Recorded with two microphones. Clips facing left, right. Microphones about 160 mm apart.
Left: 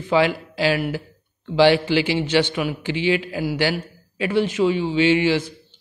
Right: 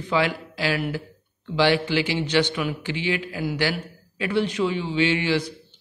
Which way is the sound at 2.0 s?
15° left (ahead or behind).